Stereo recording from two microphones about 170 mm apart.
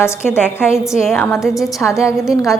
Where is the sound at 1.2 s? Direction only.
10° left (ahead or behind).